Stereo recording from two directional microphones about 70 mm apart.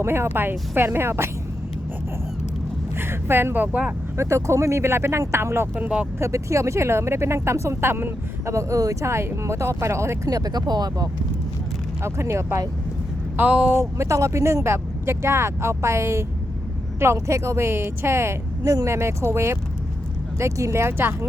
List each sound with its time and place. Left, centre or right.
0.0 s speech: right
3.0 s speech: right
4.2 s speech: right
5.7 s speech: right
6.1 s speech: right
8.5 s speech: right
10.2 s speech: right
12.0 s speech: right
13.3 s speech: right
13.7 s speech: right
18.6 s speech: right